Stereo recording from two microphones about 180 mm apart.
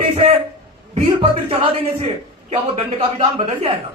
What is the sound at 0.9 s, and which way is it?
Speech, 30° right (ahead or behind).